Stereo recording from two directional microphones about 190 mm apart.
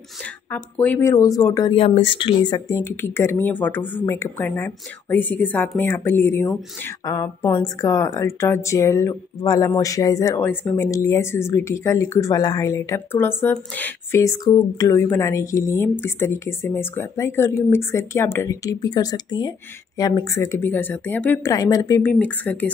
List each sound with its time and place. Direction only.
0.5 s speech: 10° left (ahead or behind)